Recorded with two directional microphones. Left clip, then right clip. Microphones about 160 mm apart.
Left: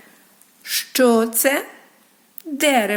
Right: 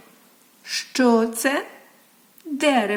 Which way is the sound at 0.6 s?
15° left (ahead or behind).